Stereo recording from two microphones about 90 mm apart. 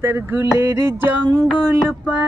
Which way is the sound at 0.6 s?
40° right (ahead or behind).